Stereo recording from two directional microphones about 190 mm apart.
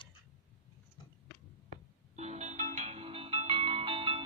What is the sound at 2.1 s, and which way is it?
Music, 35° right (ahead or behind).